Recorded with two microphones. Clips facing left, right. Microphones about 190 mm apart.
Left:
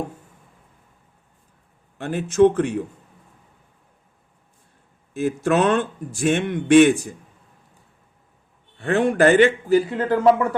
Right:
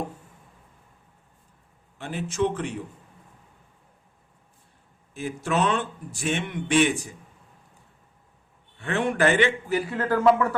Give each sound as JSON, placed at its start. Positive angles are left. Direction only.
{"t": 2.0, "sound": "speech", "side_deg": 50}
{"t": 5.5, "sound": "speech", "side_deg": 50}
{"t": 8.8, "sound": "a man's voice", "side_deg": 35}
{"t": 9.9, "sound": "speech", "side_deg": 20}